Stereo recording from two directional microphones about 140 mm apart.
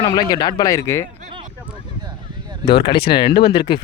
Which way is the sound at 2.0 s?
30° right (ahead or behind).